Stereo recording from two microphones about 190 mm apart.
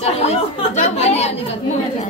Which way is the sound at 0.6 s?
35° left (ahead or behind).